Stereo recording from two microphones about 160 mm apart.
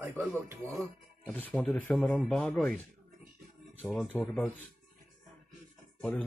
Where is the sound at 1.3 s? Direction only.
10° left (ahead or behind).